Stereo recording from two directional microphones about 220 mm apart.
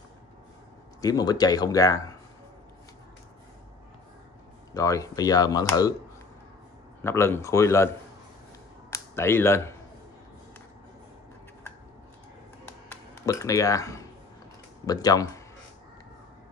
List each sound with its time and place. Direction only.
1.0 s speech: 15° left (ahead or behind)
4.7 s speech: 15° left (ahead or behind)
7.0 s speech: 10° left (ahead or behind)
8.9 s speech: 10° left (ahead or behind)
12.9 s speech: 15° left (ahead or behind)